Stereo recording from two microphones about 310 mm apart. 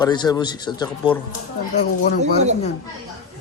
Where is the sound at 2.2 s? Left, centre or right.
Right.